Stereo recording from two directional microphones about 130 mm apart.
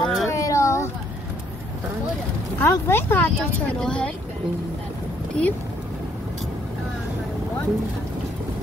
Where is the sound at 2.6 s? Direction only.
20° left (ahead or behind).